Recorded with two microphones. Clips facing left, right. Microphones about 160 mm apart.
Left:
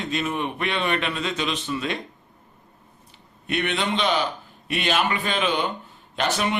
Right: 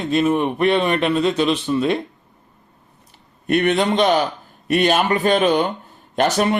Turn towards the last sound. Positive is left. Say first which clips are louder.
# right 7 dB
turn(degrees=-40)  # may be behind; listen again after turning